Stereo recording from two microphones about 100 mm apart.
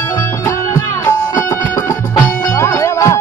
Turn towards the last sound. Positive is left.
turn(degrees=30)  # may be behind; listen again after turning